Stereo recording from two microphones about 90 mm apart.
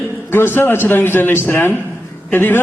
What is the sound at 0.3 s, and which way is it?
A man's voice, 25° left (ahead or behind).